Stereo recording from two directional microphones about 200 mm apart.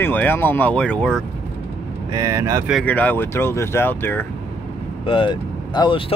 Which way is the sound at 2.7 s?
5° left (ahead or behind).